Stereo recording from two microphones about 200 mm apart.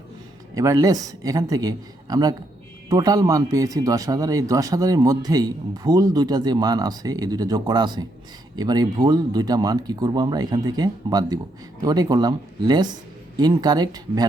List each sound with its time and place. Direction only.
0.5 s a man's voice: 15° right (ahead or behind)